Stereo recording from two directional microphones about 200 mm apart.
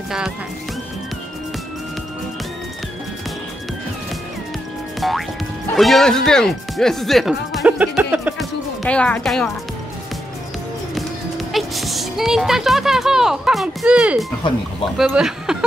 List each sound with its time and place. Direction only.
5.0 s music: centre (ahead or behind)
5.8 s speech: centre (ahead or behind)
8.8 s speech: 5° left (ahead or behind)
11.0 s speech: centre (ahead or behind)